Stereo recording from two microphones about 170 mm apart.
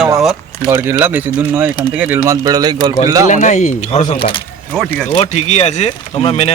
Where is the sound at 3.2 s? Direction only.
45° left (ahead or behind).